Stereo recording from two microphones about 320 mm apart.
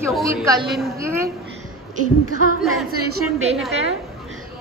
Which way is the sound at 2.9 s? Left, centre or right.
Right.